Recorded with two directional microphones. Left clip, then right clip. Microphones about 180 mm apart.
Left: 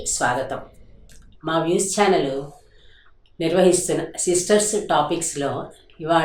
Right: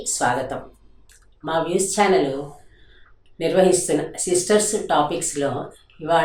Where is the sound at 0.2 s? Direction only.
15° left (ahead or behind).